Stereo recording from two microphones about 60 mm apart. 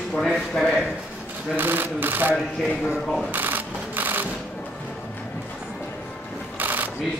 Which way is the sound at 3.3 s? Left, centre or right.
Right.